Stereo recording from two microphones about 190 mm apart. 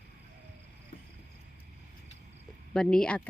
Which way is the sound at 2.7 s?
5° left (ahead or behind).